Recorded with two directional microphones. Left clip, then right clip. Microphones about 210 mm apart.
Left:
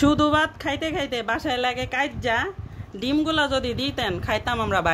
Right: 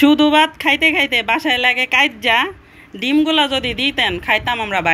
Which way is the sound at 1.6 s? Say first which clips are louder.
Right 9 dB; 10° left (ahead or behind).